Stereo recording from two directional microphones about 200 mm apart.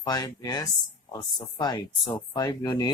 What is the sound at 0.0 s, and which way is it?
Speech, 20° left (ahead or behind).